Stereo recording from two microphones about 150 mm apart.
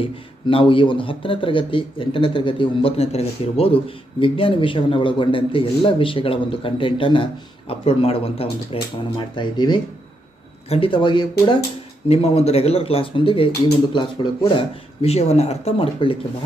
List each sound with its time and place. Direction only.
0.0 s speech: 35° left (ahead or behind)
12.1 s speech: 45° left (ahead or behind)